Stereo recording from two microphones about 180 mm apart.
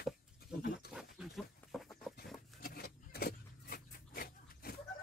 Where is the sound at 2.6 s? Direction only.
55° left (ahead or behind).